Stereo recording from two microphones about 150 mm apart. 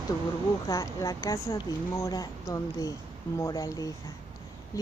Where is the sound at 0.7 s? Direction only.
20° left (ahead or behind).